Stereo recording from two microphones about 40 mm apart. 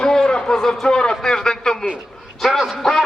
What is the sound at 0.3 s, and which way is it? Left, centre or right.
Speech, centre.